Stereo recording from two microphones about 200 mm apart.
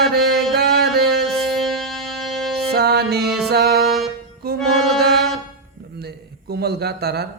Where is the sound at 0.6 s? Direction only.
55° right (ahead or behind).